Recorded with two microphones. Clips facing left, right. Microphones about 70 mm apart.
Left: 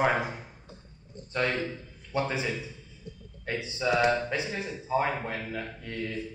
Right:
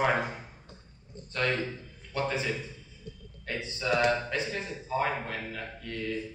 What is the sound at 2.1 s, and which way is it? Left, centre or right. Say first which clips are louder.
Speech: left 1 dB; centre.